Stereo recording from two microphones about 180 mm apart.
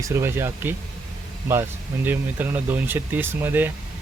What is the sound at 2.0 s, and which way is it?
Speech, 10° right (ahead or behind).